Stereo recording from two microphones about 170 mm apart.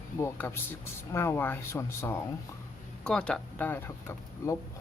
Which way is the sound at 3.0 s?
5° left (ahead or behind).